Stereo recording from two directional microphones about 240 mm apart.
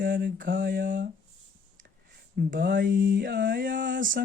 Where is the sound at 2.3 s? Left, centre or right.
Right.